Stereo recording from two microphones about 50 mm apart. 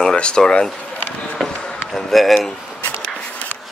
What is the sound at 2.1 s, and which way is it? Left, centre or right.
Speech, centre.